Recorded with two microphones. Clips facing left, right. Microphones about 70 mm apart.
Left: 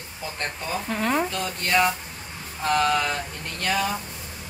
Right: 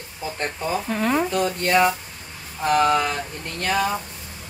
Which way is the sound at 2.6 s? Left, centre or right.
Centre.